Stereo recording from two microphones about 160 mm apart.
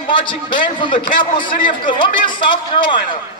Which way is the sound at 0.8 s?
30° left (ahead or behind).